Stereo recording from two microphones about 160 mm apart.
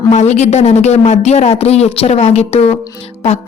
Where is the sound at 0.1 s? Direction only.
45° left (ahead or behind).